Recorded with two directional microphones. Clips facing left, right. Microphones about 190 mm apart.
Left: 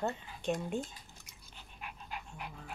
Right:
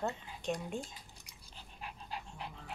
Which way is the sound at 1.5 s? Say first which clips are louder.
Even; 35° right (ahead or behind).